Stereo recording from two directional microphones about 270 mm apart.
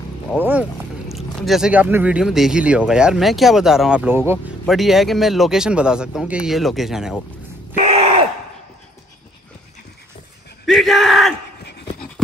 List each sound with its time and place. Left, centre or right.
0.4 s speech: centre
7.7 s groan: right
10.7 s speech: centre